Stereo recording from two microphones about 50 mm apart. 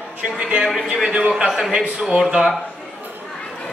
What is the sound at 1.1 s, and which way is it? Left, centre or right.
Speech, centre.